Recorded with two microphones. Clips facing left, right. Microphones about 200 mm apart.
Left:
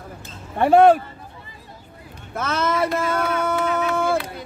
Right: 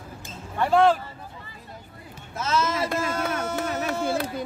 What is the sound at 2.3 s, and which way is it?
Speech, 60° left (ahead or behind).